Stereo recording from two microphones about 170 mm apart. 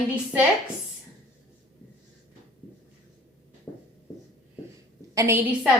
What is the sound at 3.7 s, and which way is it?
Writing, 20° left (ahead or behind).